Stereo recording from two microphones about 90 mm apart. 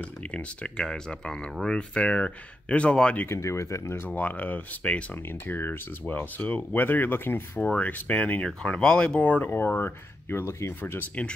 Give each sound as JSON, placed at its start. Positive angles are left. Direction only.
{"t": 0.3, "sound": "speech", "side_deg": 10}
{"t": 3.3, "sound": "speech", "side_deg": 35}
{"t": 4.1, "sound": "speech", "side_deg": 20}